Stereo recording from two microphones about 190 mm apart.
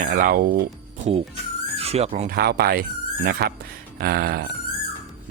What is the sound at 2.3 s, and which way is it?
Speech, 55° right (ahead or behind).